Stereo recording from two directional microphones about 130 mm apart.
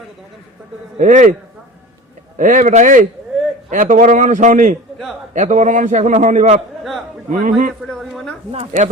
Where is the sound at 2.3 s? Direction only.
90° right.